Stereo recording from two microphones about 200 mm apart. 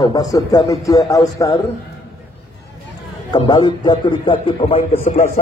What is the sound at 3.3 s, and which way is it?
A man's voice, 20° left (ahead or behind).